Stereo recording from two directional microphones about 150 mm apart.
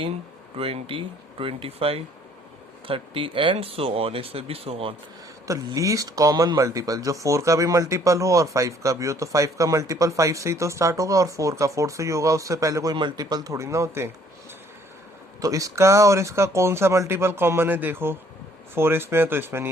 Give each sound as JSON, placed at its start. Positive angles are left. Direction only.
{"t": 0.5, "sound": "speech", "side_deg": -40}
{"t": 5.5, "sound": "speech", "side_deg": -20}
{"t": 15.4, "sound": "speech", "side_deg": -25}